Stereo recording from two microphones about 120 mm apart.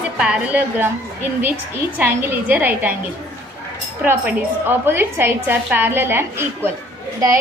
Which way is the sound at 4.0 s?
15° right (ahead or behind).